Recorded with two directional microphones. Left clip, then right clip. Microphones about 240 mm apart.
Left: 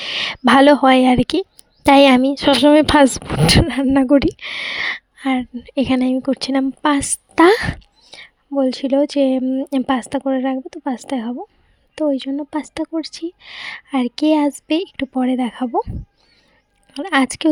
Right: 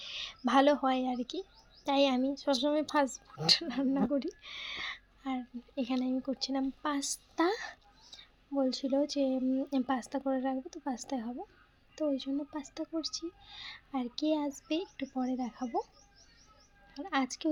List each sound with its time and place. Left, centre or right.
0.0 s speech: left
16.9 s speech: left